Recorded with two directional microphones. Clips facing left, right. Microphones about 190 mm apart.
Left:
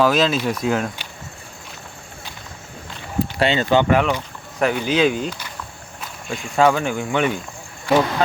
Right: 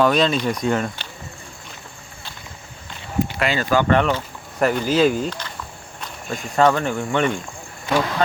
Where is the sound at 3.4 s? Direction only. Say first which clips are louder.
Left 3 dB; 25° left (ahead or behind).